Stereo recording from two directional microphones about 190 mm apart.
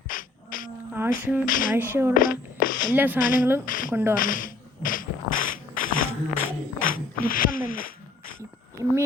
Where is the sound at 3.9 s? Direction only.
10° right (ahead or behind).